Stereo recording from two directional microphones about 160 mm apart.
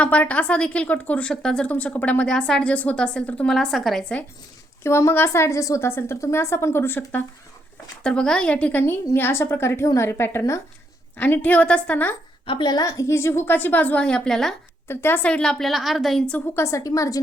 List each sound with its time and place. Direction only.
0.0 s a woman's voice: 10° left (ahead or behind)
4.8 s a woman's voice: 15° left (ahead or behind)
12.5 s a woman's voice: 30° left (ahead or behind); by 14.5 s 5° left (ahead or behind)
14.8 s a woman's voice: 15° left (ahead or behind)
16.3 s a woman's voice: 15° left (ahead or behind)